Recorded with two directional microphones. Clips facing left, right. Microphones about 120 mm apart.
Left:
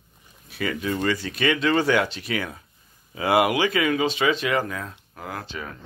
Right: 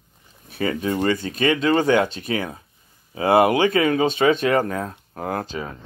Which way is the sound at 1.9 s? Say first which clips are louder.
Right 4 dB; 25° right (ahead or behind).